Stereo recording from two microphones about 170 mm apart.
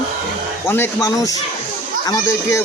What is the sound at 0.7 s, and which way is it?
Speech, 15° left (ahead or behind).